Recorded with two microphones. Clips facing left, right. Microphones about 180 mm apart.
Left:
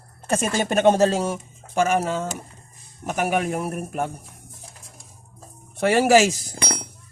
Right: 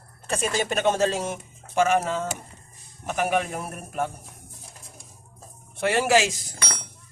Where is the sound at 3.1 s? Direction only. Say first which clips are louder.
Left 2 dB; 40° left (ahead or behind).